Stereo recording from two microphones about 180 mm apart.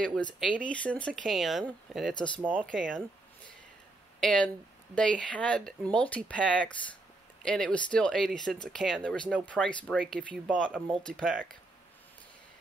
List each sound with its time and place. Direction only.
0.0 s speech: 5° left (ahead or behind)
4.2 s speech: 5° left (ahead or behind)